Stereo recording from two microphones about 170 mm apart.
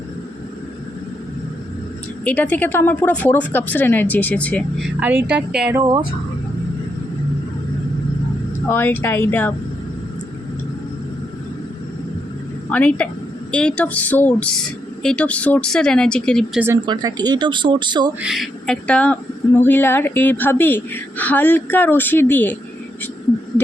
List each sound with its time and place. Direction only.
2.2 s speech: 10° left (ahead or behind)
4.9 s speech: 10° right (ahead or behind)
8.7 s speech: 10° left (ahead or behind)
12.7 s speech: 5° left (ahead or behind)
16.6 s speech: 15° right (ahead or behind)
16.8 s speech: 25° right (ahead or behind)
18.2 s speech: centre (ahead or behind)